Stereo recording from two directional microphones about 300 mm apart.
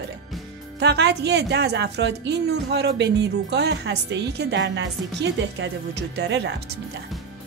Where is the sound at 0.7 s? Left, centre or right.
Right.